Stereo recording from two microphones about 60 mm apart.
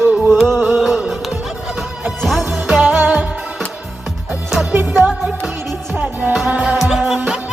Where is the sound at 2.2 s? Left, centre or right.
Centre.